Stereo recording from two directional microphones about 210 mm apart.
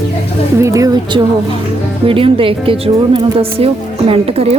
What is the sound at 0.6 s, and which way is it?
Speech, 15° right (ahead or behind).